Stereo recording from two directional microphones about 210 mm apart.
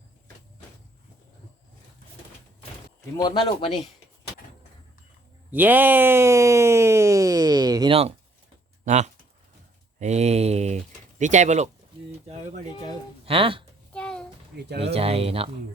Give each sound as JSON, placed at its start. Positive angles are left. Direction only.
{"t": 3.2, "sound": "speech", "side_deg": 20}
{"t": 5.5, "sound": "a sound", "side_deg": -10}
{"t": 8.8, "sound": "speech", "side_deg": -35}
{"t": 13.2, "sound": "speech", "side_deg": -25}
{"t": 13.9, "sound": "a sound", "side_deg": 5}
{"t": 14.9, "sound": "speech", "side_deg": -30}